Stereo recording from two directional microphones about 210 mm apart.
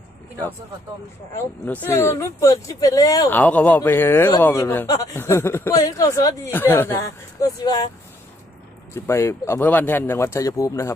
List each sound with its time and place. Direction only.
1.4 s speech: 10° left (ahead or behind)
8.9 s speech: 10° left (ahead or behind)